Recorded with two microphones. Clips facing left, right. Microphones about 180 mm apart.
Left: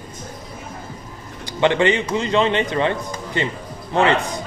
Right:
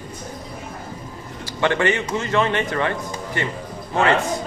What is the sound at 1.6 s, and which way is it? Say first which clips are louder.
A man's voice: left 3 dB; 20° left (ahead or behind).